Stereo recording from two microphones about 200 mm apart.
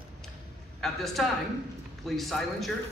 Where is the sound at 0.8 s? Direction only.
Centre (ahead or behind).